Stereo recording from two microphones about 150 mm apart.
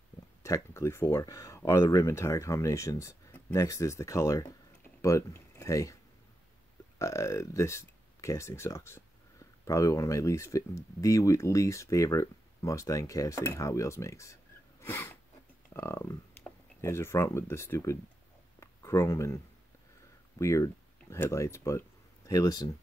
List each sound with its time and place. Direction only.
0.4 s speech: 20° left (ahead or behind)
7.0 s speech: 20° left (ahead or behind)
18.6 s a sound: 20° left (ahead or behind)
20.3 s speech: 20° left (ahead or behind)